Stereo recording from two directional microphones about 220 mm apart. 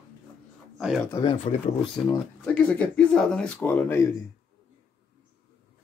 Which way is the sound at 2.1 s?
5° left (ahead or behind).